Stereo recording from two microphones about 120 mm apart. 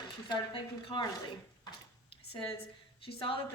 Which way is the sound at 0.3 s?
45° left (ahead or behind).